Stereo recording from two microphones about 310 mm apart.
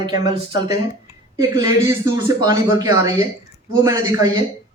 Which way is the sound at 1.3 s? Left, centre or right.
Centre.